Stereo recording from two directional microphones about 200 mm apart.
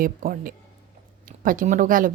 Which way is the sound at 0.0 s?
45° right (ahead or behind).